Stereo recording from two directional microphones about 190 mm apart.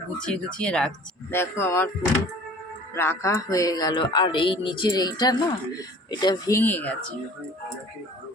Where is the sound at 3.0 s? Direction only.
15° left (ahead or behind).